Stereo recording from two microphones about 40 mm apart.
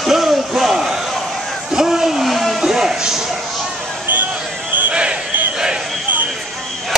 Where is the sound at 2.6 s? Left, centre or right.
Centre.